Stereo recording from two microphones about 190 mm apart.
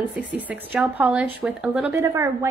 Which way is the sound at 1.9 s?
15° right (ahead or behind).